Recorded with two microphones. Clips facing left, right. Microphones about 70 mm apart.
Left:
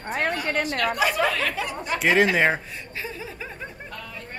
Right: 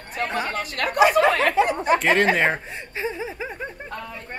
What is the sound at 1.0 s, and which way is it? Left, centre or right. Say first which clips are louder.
Speech: right 8 dB; right.